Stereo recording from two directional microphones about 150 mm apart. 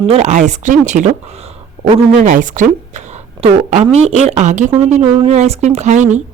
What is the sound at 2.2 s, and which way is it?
Speech, 60° right (ahead or behind).